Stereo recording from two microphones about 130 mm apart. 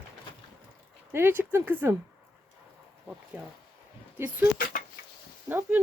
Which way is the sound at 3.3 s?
15° right (ahead or behind).